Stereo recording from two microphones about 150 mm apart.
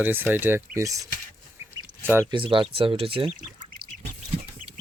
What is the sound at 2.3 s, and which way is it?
Speech, 35° right (ahead or behind).